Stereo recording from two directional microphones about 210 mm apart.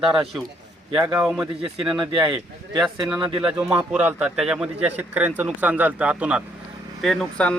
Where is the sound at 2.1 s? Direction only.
25° right (ahead or behind).